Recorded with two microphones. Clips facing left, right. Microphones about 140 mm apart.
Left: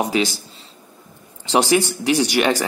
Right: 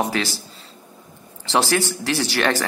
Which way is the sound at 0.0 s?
15° left (ahead or behind).